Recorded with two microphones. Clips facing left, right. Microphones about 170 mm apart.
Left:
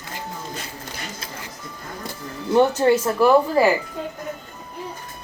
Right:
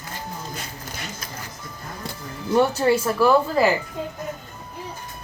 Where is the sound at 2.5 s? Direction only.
20° left (ahead or behind).